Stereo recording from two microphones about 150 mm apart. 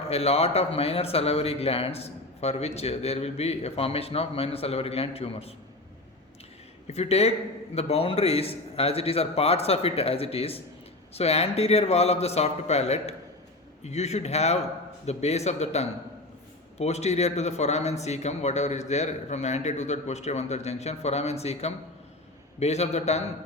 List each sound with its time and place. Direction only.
0.1 s a man's voice: 45° left (ahead or behind)
6.8 s a man's voice: 45° left (ahead or behind)